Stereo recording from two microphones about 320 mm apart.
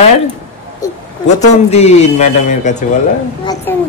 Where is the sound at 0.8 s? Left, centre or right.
Centre.